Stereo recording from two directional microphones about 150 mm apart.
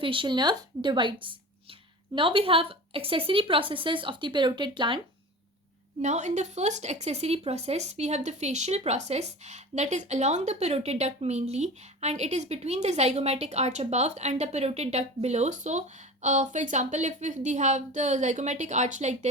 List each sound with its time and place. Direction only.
0.0 s a woman's voice: 35° right (ahead or behind)
6.0 s speech: 50° right (ahead or behind)